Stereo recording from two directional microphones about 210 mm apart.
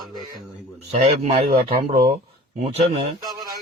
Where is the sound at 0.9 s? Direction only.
30° right (ahead or behind).